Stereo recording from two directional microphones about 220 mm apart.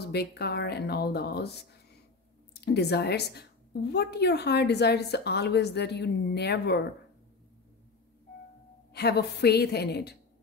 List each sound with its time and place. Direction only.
0.0 s a woman's voice: 45° left (ahead or behind)
8.9 s a woman's voice: 50° left (ahead or behind)